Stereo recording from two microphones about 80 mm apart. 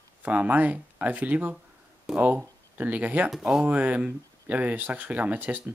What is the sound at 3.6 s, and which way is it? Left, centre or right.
Speech, centre.